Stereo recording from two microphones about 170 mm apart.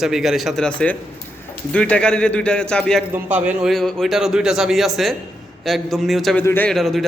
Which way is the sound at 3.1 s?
10° right (ahead or behind).